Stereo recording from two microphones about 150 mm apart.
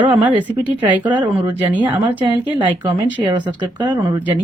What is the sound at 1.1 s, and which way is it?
Speech, 30° right (ahead or behind).